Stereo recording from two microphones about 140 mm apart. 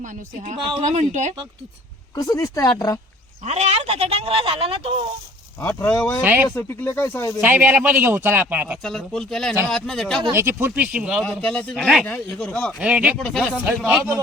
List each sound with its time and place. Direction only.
0.0 s speech: 65° right (ahead or behind)
2.1 s speech: 25° left (ahead or behind)
3.4 s speech: 50° right (ahead or behind)
5.5 s speech: 15° left (ahead or behind)
6.2 s speech: 15° right (ahead or behind)
6.5 s speech: 15° left (ahead or behind)
7.6 s speech: 10° right (ahead or behind)
8.8 s speech: 5° left (ahead or behind)
10.3 s speech: 15° right (ahead or behind)
11.2 s speech: 5° left (ahead or behind)
12.8 s speech: 10° right (ahead or behind)
13.1 s speech: 5° left (ahead or behind)
13.7 s speech: 10° right (ahead or behind)